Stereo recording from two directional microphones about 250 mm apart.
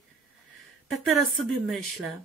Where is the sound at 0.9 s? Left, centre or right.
Centre.